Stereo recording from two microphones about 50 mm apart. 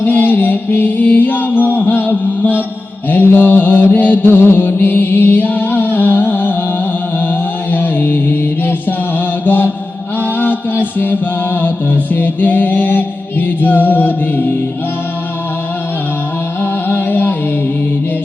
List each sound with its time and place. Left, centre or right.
0.0 s music: left
3.1 s mantra: left
7.7 s chant: left
10.2 s mantra: left
10.8 s music: left
16.6 s music: left